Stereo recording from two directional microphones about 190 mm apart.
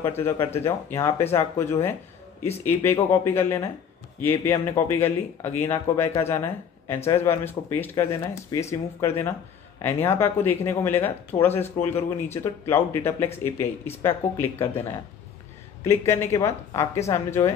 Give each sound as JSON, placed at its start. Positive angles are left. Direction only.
{"t": 0.0, "sound": "speech", "side_deg": 10}
{"t": 15.8, "sound": "speech", "side_deg": 15}